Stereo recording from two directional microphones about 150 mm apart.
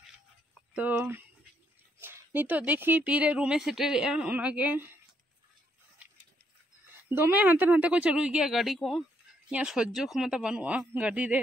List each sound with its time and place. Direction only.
0.7 s speech: 10° right (ahead or behind)
7.1 s speech: 15° right (ahead or behind)